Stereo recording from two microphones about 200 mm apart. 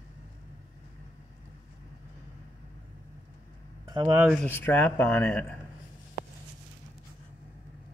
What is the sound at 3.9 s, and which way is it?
Speech, 20° right (ahead or behind).